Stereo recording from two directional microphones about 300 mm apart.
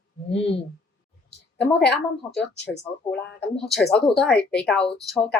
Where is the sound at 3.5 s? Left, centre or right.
Centre.